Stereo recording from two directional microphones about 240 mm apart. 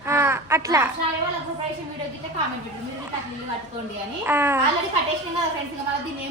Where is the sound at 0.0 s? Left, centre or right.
Centre.